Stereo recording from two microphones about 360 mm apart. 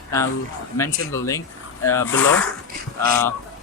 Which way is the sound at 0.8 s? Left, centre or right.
Centre.